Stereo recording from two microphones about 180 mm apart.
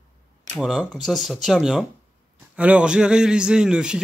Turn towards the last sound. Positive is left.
turn(degrees=-5)  # may be behind; listen again after turning